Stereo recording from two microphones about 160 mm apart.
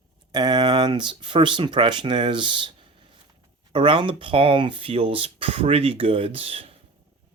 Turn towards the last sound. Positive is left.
turn(degrees=-35)  # may be behind; listen again after turning